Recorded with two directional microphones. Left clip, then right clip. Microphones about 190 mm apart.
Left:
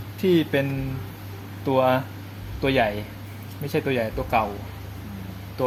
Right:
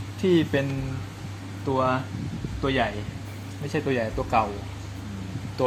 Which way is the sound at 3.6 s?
10° left (ahead or behind).